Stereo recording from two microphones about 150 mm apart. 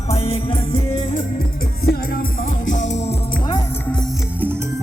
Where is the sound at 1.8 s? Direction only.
90° left.